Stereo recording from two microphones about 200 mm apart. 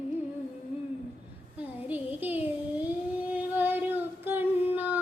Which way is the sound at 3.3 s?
10° right (ahead or behind).